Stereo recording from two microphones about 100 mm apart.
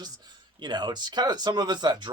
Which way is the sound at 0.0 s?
45° right (ahead or behind).